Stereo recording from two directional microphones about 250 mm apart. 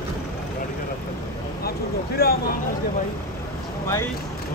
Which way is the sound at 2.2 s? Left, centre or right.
Left.